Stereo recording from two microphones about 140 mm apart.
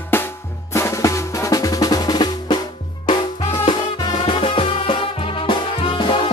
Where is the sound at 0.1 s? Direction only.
15° left (ahead or behind).